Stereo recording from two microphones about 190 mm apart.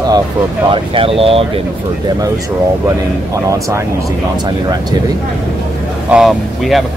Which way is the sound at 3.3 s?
15° right (ahead or behind).